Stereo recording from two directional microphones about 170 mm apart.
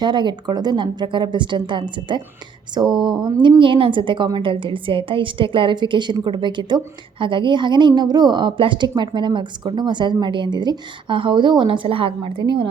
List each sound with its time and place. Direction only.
0.0 s a woman's voice: 25° right (ahead or behind)